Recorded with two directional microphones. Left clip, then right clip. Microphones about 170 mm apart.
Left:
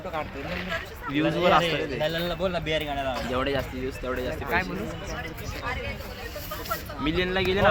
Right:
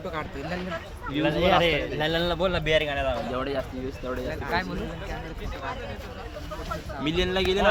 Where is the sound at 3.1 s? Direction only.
55° left (ahead or behind).